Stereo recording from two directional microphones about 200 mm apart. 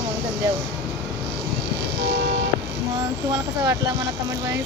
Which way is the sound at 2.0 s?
60° right (ahead or behind).